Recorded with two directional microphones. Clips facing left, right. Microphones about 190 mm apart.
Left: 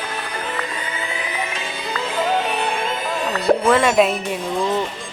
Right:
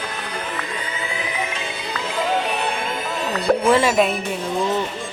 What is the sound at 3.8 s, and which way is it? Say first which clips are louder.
Speech: left 2 dB; centre (ahead or behind).